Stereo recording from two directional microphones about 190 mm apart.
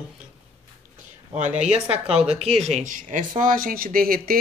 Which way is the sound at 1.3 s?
40° right (ahead or behind).